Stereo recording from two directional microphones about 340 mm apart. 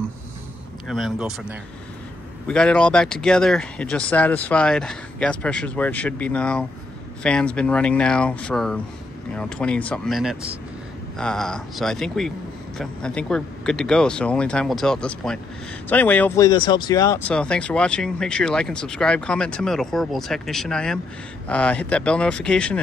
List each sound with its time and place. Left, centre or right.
0.8 s speech: centre